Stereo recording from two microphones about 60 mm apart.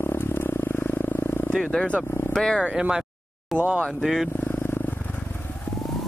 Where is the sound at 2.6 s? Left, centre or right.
Centre.